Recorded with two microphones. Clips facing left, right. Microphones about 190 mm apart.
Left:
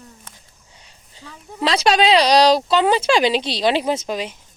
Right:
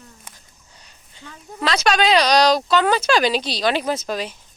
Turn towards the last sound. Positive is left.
turn(degrees=20)  # may be behind; listen again after turning